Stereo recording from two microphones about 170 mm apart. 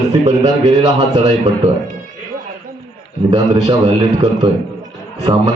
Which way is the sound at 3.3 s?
20° right (ahead or behind).